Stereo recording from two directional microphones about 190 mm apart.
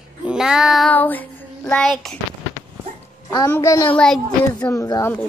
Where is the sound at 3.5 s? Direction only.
15° left (ahead or behind).